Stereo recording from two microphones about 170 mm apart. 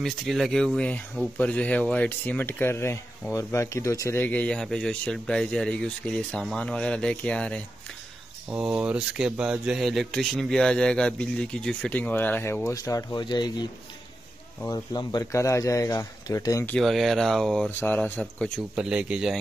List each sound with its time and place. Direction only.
0.0 s speech: centre (ahead or behind)
8.5 s speech: 5° right (ahead or behind); by 13.7 s 25° left (ahead or behind)
14.7 s speech: 25° left (ahead or behind)
16.7 s speech: centre (ahead or behind)
18.2 s speech: 5° right (ahead or behind)